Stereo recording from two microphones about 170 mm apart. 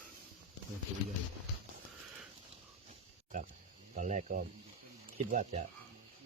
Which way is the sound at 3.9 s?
45° right (ahead or behind).